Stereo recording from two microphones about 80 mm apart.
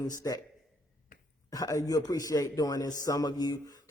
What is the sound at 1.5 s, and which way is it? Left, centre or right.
A man's voice, left.